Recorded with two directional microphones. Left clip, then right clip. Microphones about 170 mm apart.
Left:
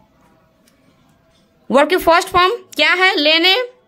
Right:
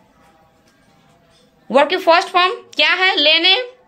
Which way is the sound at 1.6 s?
45° left (ahead or behind).